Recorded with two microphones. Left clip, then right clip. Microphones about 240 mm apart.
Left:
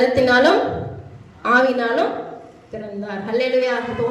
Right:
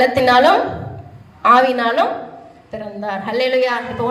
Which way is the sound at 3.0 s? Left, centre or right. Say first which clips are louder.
Right 3 dB; centre.